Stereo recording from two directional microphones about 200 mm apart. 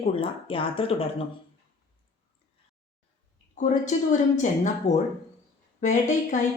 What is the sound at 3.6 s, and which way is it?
A woman's voice, 35° left (ahead or behind).